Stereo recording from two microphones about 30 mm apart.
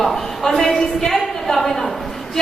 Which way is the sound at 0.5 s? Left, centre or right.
Centre.